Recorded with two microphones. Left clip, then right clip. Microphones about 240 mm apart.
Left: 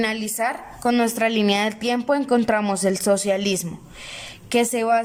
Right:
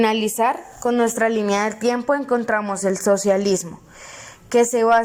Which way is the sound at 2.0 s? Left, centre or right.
Centre.